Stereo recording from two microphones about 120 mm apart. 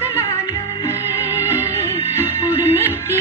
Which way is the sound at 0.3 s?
25° left (ahead or behind).